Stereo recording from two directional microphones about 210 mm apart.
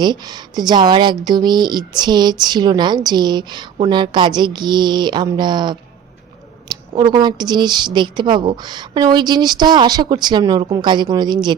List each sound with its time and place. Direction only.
0.0 s a woman's voice: 20° right (ahead or behind)